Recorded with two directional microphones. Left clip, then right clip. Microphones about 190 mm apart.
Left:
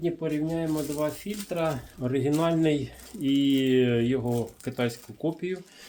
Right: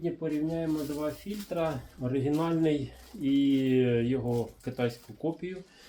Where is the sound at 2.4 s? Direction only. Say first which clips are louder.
Left 3 dB; 35° left (ahead or behind).